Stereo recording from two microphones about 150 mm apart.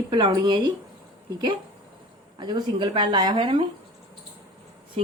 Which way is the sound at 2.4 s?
30° right (ahead or behind).